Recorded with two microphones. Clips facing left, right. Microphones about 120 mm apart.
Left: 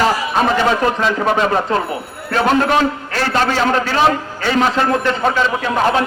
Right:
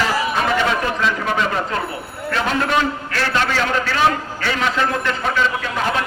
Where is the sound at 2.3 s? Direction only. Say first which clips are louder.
Left 5 dB; 40° left (ahead or behind).